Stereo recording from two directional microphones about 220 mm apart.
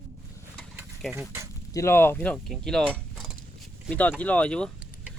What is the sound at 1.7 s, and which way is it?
Speech, 15° left (ahead or behind).